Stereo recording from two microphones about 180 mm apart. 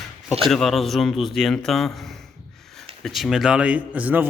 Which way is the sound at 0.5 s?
Centre (ahead or behind).